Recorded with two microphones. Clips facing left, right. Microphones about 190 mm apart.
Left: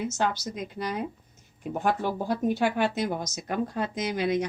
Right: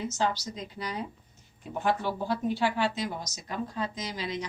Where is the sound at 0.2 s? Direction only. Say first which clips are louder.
Right 1 dB; 55° left (ahead or behind).